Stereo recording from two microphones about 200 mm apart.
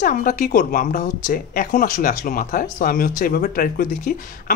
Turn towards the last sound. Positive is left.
turn(degrees=45)  # may be behind; listen again after turning